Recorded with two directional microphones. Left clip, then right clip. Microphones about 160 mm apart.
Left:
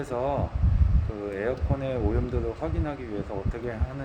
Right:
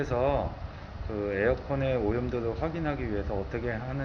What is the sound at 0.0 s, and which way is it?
Speech, 20° left (ahead or behind).